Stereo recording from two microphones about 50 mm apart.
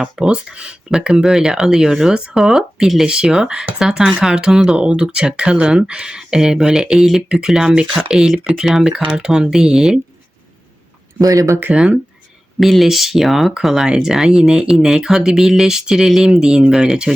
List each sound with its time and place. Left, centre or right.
0.0 s speech: centre
11.3 s speech: right
11.7 s speech: right
12.5 s speech: centre